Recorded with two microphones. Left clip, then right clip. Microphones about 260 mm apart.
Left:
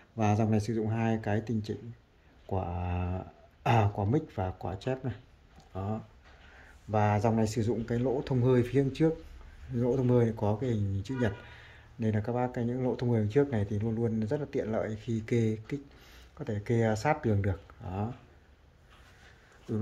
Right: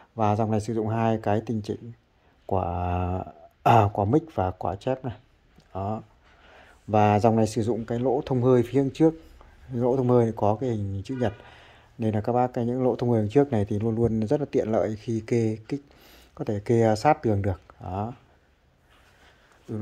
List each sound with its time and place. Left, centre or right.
0.1 s speech: centre
6.5 s speech: right